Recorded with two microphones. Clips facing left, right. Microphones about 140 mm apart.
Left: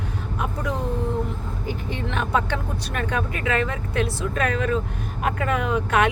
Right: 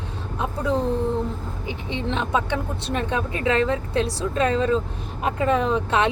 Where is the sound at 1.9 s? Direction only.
20° right (ahead or behind).